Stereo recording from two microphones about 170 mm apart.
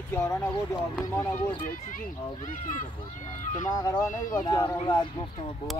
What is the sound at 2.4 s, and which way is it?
Speech, 50° left (ahead or behind).